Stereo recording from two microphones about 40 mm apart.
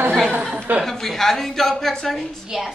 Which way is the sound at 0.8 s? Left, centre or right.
Centre.